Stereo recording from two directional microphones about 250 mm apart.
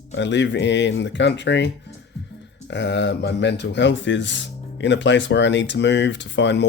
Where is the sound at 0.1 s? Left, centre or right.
Left.